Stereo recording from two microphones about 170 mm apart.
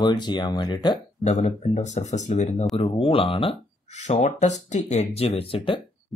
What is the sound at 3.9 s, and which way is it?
Speech, 45° left (ahead or behind).